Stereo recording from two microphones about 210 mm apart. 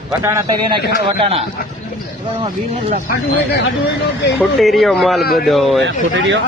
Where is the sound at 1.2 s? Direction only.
30° right (ahead or behind).